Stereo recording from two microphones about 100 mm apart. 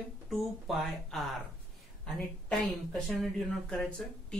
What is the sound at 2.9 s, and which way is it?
Speech, 5° left (ahead or behind).